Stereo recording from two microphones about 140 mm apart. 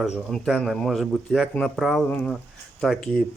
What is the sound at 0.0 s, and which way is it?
Speech, centre (ahead or behind).